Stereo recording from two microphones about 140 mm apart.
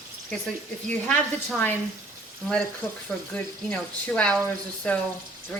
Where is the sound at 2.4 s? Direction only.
Centre (ahead or behind).